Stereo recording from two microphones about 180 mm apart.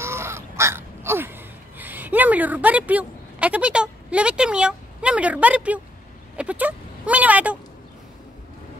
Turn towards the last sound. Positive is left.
turn(degrees=-10)  # may be behind; listen again after turning